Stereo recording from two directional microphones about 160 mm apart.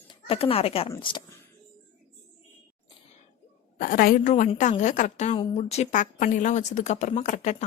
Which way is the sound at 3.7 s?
60° left (ahead or behind).